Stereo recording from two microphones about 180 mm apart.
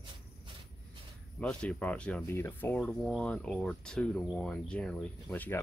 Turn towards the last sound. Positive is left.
turn(degrees=10)  # may be behind; listen again after turning